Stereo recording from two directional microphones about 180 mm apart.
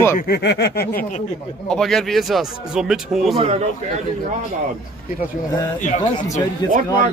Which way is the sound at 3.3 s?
30° right (ahead or behind).